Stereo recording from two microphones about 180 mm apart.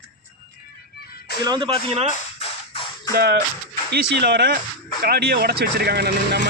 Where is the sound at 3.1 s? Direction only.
65° right (ahead or behind).